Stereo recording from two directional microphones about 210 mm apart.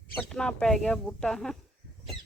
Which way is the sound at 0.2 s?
Centre (ahead or behind).